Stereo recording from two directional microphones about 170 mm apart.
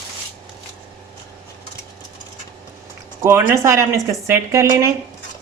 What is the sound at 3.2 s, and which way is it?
Speech, 15° right (ahead or behind).